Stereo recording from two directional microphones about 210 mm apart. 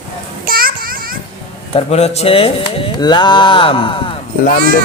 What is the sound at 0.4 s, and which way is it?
Children playing, 45° right (ahead or behind).